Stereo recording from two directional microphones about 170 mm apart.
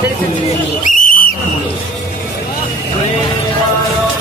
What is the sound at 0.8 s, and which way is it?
Whistle, 50° left (ahead or behind).